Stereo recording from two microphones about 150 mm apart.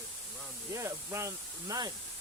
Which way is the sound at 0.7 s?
20° right (ahead or behind).